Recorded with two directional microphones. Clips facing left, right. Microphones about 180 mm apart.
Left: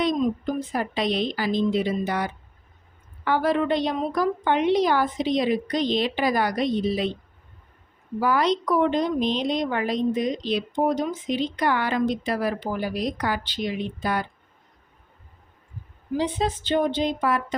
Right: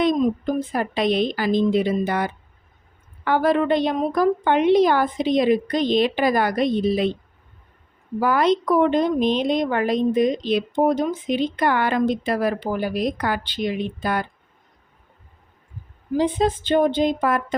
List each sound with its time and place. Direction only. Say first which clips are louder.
0.0 s a woman's voice: right 4 dB; 50° right (ahead or behind)
8.2 s speech: right 3 dB; 55° right (ahead or behind)
16.1 s speech: right 5 dB; 50° right (ahead or behind)